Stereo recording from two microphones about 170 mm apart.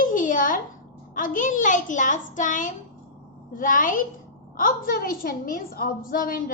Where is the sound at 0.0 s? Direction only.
50° left (ahead or behind).